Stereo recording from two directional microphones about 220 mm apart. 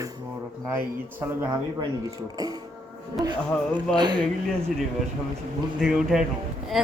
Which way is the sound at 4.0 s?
20° right (ahead or behind).